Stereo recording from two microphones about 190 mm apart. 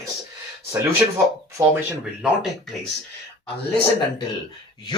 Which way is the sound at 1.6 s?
5° right (ahead or behind).